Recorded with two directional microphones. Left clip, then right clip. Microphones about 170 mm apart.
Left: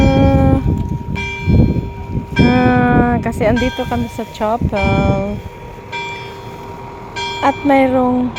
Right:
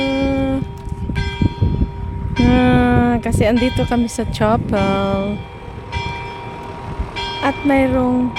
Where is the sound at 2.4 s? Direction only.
25° right (ahead or behind).